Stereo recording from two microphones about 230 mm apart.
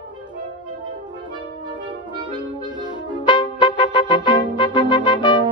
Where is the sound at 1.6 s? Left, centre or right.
Centre.